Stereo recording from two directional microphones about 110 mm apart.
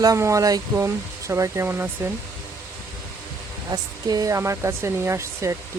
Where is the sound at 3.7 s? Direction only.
35° right (ahead or behind).